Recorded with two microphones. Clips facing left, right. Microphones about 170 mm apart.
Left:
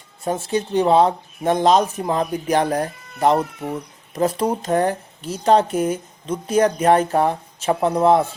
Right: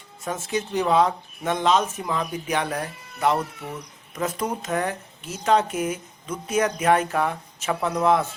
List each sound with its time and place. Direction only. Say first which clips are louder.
0.3 s speech: left 5 dB; 30° left (ahead or behind)